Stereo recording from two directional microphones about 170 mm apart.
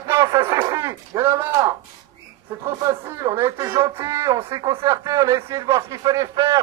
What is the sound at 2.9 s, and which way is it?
Speech, 15° right (ahead or behind).